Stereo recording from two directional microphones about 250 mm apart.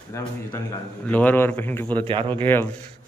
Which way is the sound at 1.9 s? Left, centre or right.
Centre.